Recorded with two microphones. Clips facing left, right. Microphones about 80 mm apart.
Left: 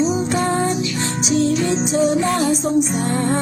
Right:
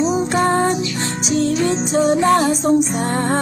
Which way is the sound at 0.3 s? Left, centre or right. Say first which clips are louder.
Right 3 dB; right.